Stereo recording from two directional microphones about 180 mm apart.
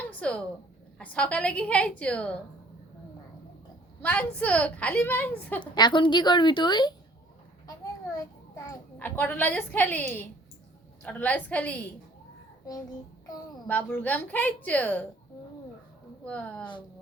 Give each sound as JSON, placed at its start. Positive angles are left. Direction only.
{"t": 0.1, "sound": "a sound", "side_deg": 5}
{"t": 0.9, "sound": "a woman's voice", "side_deg": 5}
{"t": 4.0, "sound": "a woman's voice", "side_deg": 10}
{"t": 5.7, "sound": "a woman's voice", "side_deg": 25}
{"t": 8.1, "sound": "a child's voice", "side_deg": 20}
{"t": 13.7, "sound": "a woman's voice", "side_deg": 10}
{"t": 16.2, "sound": "a woman's voice", "side_deg": 5}